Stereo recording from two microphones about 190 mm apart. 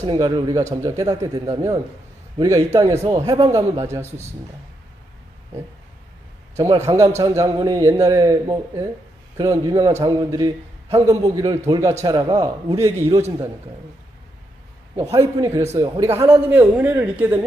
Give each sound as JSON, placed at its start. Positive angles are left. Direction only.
{"t": 0.0, "sound": "a man's voice", "side_deg": -20}
{"t": 7.2, "sound": "a man's voice", "side_deg": -20}
{"t": 14.9, "sound": "a man's voice", "side_deg": -15}